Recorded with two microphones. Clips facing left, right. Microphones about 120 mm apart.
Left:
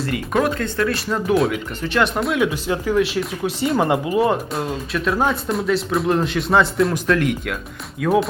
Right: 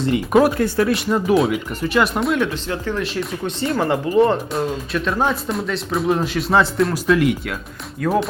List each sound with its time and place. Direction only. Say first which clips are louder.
0.0 s speech: right 5 dB; 25° right (ahead or behind)
0.9 s speech: right 2 dB; centre (ahead or behind)
3.8 s speech: right 3 dB; 15° left (ahead or behind); by 8.3 s centre (ahead or behind)